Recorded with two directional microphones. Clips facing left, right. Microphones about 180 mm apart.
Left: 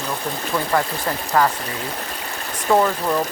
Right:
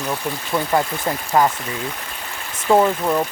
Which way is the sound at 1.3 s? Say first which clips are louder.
Right 1 dB; 15° right (ahead or behind).